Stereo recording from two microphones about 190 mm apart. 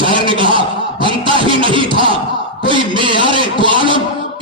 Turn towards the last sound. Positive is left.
turn(degrees=-25)  # may be behind; listen again after turning